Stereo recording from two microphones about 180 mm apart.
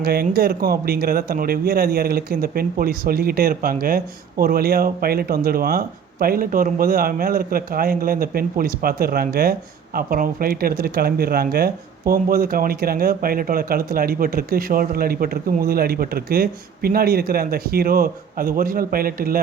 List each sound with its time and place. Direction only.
0.0 s speech: 60° right (ahead or behind)